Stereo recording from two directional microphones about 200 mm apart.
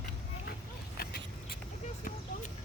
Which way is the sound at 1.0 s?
50° left (ahead or behind).